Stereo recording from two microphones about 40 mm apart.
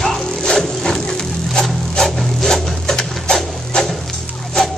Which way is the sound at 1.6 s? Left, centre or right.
Centre.